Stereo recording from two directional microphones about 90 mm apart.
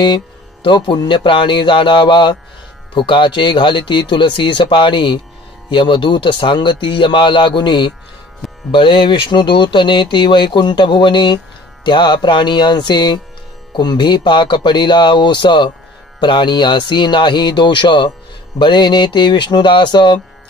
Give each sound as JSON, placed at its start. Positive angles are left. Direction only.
{"t": 0.7, "sound": "speech", "side_deg": 60}